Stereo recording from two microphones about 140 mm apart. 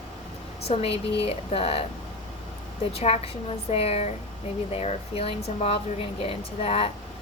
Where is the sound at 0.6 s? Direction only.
45° left (ahead or behind).